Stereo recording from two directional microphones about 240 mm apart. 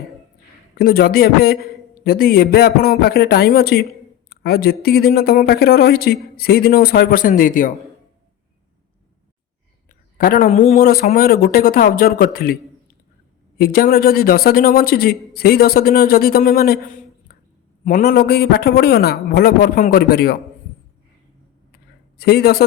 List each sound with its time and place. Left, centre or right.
0.8 s a man's voice: left
10.2 s a man's voice: left
13.6 s a man's voice: left
22.2 s a man's voice: left